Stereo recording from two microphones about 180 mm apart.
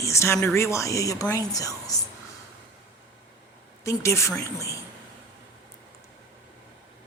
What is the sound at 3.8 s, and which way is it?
Speech, 15° left (ahead or behind).